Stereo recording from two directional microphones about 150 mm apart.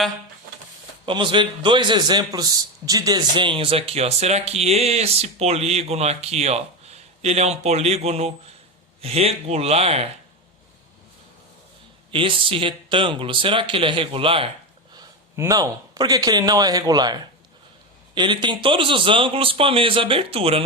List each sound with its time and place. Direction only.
1.0 s a man's voice: 35° right (ahead or behind)
12.1 s a man's voice: 35° right (ahead or behind)
15.4 s a man's voice: 20° right (ahead or behind); by 20.6 s 40° right (ahead or behind)